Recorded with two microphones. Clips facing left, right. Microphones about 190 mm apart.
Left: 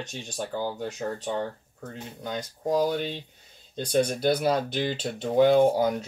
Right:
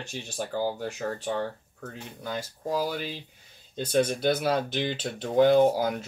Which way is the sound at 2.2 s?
5° right (ahead or behind).